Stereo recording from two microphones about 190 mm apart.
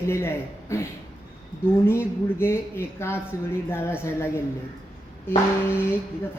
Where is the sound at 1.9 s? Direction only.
15° left (ahead or behind).